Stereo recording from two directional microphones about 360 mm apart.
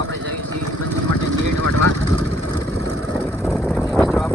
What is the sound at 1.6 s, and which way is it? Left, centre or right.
Speech, right.